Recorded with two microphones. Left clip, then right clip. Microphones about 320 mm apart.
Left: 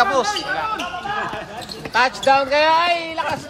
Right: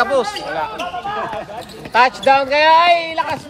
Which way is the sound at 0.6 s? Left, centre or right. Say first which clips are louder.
Right 1 dB; centre.